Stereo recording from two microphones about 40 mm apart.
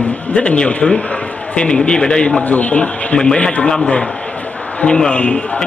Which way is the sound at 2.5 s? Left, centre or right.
Left.